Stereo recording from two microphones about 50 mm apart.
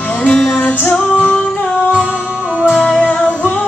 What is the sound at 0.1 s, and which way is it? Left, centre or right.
Music, left.